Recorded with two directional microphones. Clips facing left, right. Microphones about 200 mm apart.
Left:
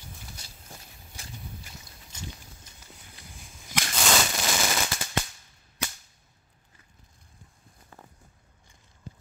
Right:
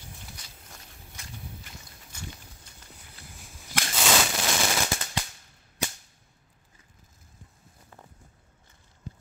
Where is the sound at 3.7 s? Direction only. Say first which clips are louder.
Right 1 dB; 5° right (ahead or behind).